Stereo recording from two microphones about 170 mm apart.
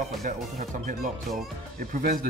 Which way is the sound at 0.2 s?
55° right (ahead or behind).